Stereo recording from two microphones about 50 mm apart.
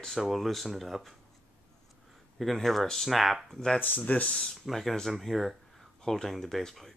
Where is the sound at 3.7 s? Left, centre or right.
Left.